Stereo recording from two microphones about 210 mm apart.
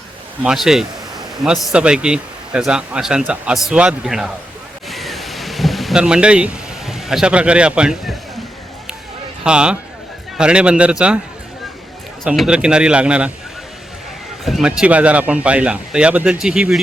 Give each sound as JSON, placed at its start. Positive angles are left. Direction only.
{"t": 0.4, "sound": "a man's voice", "side_deg": 0}
{"t": 4.9, "sound": "a sound", "side_deg": 0}
{"t": 9.4, "sound": "a man's voice", "side_deg": -5}
{"t": 12.2, "sound": "a man's voice", "side_deg": 0}
{"t": 14.4, "sound": "a man's voice", "side_deg": 0}